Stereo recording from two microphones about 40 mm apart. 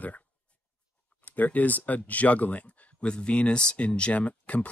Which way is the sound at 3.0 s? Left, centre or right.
Left.